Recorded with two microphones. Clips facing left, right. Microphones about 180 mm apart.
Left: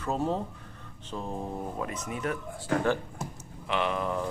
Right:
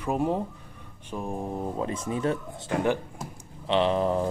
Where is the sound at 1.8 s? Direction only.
30° right (ahead or behind).